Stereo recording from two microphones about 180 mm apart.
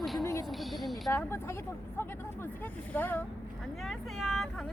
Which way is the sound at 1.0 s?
15° left (ahead or behind).